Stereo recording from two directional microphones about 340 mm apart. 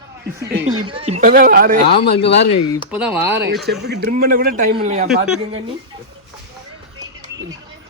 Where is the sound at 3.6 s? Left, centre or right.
Right.